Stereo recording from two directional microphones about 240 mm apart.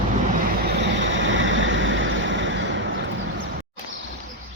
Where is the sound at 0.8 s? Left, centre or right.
Right.